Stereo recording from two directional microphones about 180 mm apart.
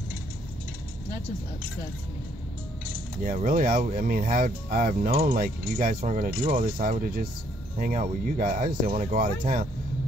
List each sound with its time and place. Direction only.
3.3 s speech: 50° right (ahead or behind)